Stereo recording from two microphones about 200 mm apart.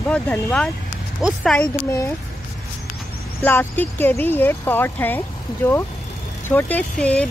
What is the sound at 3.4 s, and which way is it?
A child's voice, 10° left (ahead or behind).